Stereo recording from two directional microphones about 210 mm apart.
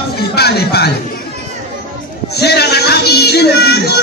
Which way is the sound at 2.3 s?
50° left (ahead or behind).